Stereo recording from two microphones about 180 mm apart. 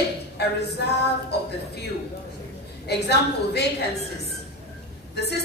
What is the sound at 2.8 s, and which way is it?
A woman's voice, 65° left (ahead or behind).